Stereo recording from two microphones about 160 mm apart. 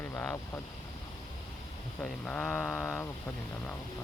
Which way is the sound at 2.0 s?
10° left (ahead or behind).